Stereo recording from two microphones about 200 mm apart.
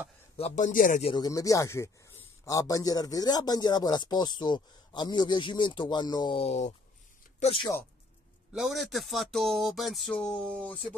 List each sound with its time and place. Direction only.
0.4 s speech: 40° left (ahead or behind)
1.1 s speech: 15° left (ahead or behind); by 7.6 s 35° left (ahead or behind)
8.5 s speech: centre (ahead or behind)